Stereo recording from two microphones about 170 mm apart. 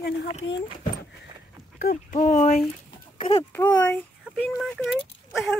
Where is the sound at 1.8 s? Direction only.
60° left (ahead or behind).